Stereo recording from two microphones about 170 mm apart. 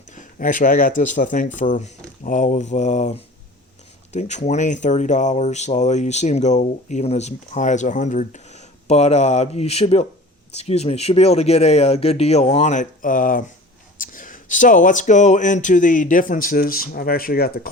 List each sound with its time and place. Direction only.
0.2 s speech: 50° left (ahead or behind)